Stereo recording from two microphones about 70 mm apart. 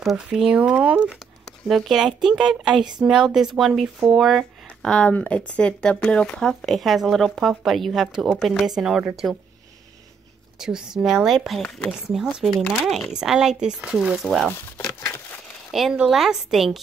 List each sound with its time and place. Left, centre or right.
0.6 s speech: centre
1.7 s speech: centre
2.7 s speech: right
3.0 s speech: centre
4.8 s speech: centre
6.6 s speech: centre
10.6 s speech: centre
15.0 s a sound: left
15.7 s speech: centre